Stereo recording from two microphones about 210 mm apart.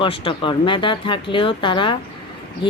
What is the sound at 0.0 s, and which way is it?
Speech, 25° left (ahead or behind).